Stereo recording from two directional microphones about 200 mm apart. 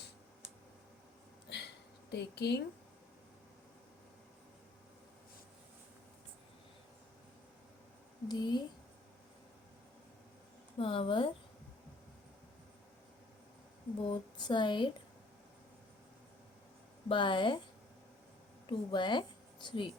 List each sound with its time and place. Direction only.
1.5 s a sound: 55° left (ahead or behind)
8.3 s speech: 20° left (ahead or behind)
10.8 s speech: 25° left (ahead or behind)
14.1 s speech: 25° left (ahead or behind)
17.1 s speech: 25° left (ahead or behind)
18.7 s speech: 25° left (ahead or behind)